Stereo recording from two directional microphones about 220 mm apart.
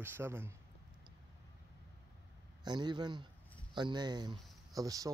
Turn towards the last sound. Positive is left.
turn(degrees=-15)  # may be behind; listen again after turning